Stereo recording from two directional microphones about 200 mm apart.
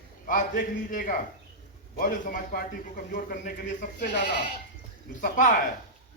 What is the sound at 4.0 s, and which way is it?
Speech, 50° left (ahead or behind).